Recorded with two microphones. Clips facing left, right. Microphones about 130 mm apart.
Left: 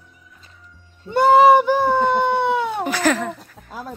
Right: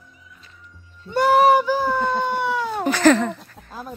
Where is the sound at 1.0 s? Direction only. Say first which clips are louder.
Left 3 dB; 25° left (ahead or behind).